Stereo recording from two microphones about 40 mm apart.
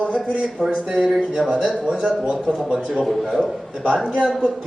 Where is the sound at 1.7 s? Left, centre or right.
Centre.